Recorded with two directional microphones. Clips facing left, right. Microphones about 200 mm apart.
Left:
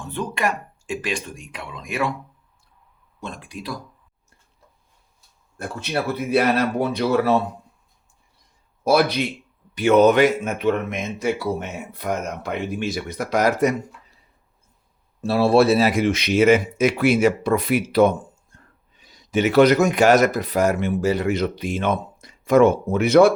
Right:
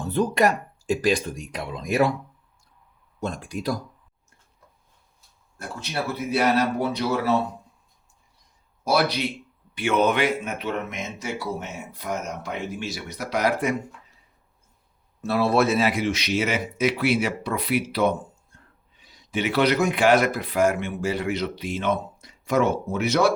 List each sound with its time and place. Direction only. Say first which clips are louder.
0.0 s speech: right 4 dB; 35° right (ahead or behind)
3.2 s speech: right 4 dB; 45° right (ahead or behind)
5.5 s speech: left 5 dB; 60° left (ahead or behind)
8.8 s speech: left 4 dB; 55° left (ahead or behind)
9.7 s speech: left 7 dB; 40° left (ahead or behind)
15.2 s speech: left 5 dB; 30° left (ahead or behind); by 23.3 s 55° left (ahead or behind)